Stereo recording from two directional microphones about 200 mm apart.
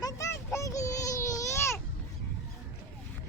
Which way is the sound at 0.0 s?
15° left (ahead or behind).